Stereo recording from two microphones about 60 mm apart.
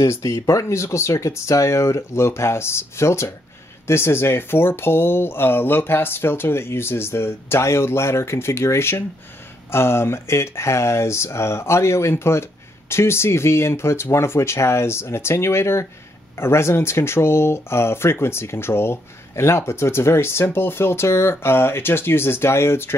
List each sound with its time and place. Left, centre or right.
0.1 s speech: left